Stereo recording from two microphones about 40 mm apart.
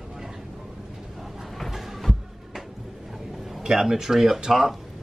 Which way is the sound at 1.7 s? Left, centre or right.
Centre.